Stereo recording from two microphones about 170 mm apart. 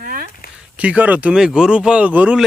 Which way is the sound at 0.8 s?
10° right (ahead or behind).